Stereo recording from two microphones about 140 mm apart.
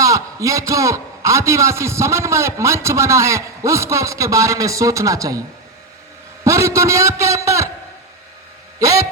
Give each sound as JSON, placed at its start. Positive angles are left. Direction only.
{"t": 0.0, "sound": "a man's voice", "side_deg": -25}
{"t": 6.4, "sound": "a man's voice", "side_deg": -20}
{"t": 8.8, "sound": "a man's voice", "side_deg": -25}